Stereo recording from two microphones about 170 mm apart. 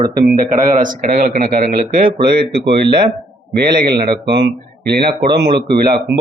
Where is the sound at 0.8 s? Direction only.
55° right (ahead or behind).